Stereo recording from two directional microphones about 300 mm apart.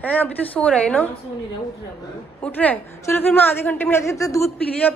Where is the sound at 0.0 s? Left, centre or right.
Centre.